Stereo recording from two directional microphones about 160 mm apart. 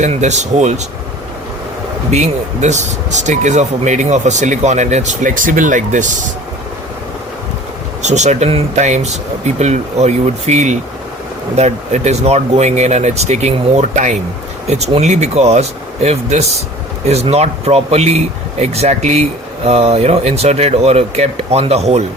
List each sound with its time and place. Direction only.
0.0 s speech: 45° right (ahead or behind)
2.0 s speech: 45° right (ahead or behind)
8.0 s speech: 45° right (ahead or behind)